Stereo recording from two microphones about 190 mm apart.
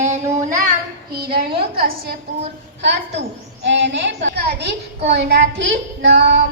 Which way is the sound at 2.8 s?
70° right (ahead or behind).